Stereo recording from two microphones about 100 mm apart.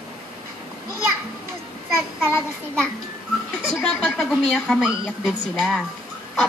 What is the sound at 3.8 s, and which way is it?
Speech, 5° left (ahead or behind).